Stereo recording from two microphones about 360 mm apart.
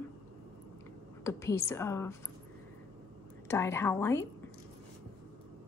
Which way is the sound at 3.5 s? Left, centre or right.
Centre.